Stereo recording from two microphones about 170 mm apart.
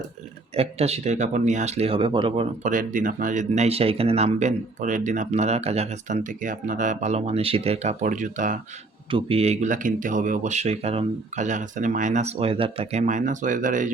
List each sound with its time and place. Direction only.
0.5 s speech: 35° right (ahead or behind)
2.6 s speech: 50° right (ahead or behind)
9.0 s speech: 30° right (ahead or behind); by 13.9 s 50° right (ahead or behind)